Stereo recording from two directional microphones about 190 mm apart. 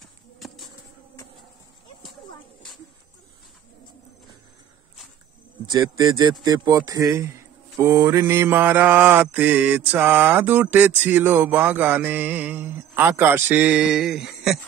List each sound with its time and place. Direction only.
0.0 s music: centre (ahead or behind)
5.7 s speech: 15° right (ahead or behind)
7.8 s mantra: 15° right (ahead or behind)